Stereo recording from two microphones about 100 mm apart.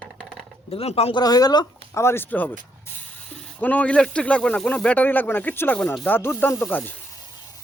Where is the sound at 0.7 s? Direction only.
80° left.